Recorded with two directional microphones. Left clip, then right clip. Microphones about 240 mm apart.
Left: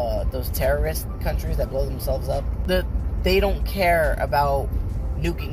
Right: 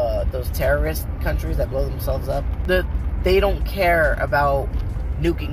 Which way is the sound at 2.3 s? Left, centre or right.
Centre.